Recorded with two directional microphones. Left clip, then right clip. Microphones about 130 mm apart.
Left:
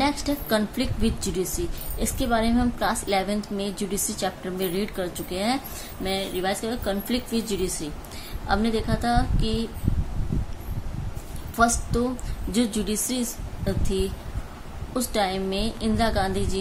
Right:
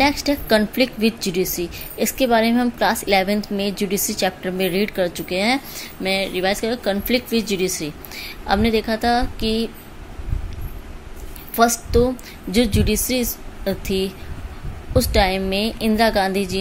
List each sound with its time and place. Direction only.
0.0 s a woman's voice: 40° right (ahead or behind)
11.5 s a woman's voice: 35° right (ahead or behind)